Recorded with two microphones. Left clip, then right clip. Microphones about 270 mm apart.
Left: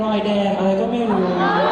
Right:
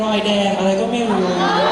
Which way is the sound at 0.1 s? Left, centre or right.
Centre.